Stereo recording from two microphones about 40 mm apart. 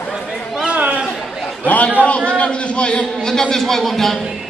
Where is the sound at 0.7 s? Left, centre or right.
Right.